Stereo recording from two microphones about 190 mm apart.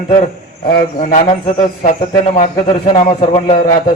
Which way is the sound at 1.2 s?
25° left (ahead or behind).